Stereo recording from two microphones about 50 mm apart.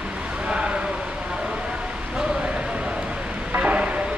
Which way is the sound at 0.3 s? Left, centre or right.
Centre.